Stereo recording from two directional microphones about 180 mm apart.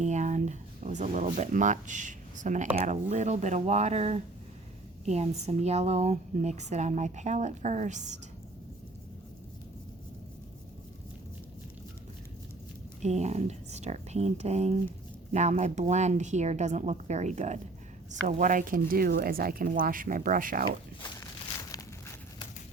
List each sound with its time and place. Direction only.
0.0 s speech: 40° right (ahead or behind)
13.0 s speech: 40° right (ahead or behind)